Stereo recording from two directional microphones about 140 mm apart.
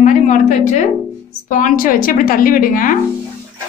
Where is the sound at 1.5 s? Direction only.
75° left (ahead or behind).